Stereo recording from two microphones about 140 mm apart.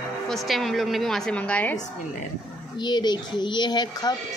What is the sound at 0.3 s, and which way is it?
A woman's voice, centre (ahead or behind).